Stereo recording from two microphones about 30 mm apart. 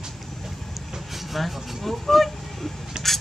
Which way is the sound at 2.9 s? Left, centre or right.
Right.